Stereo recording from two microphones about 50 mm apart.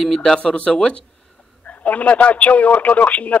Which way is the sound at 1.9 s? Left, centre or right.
Left.